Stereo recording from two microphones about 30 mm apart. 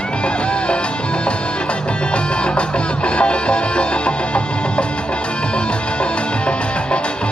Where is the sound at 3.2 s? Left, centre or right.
Left.